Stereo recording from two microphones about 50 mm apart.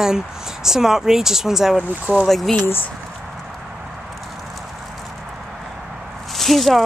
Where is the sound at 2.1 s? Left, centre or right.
Right.